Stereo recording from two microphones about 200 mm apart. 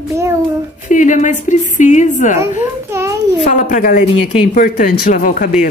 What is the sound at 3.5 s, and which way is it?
A woman's voice, 40° left (ahead or behind).